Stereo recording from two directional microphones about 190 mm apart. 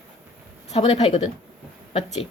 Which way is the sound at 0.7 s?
30° left (ahead or behind).